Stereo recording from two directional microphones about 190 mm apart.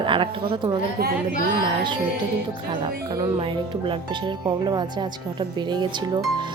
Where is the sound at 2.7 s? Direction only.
25° right (ahead or behind).